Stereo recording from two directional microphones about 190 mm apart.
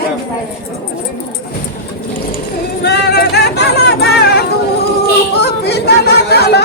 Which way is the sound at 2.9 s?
60° left (ahead or behind).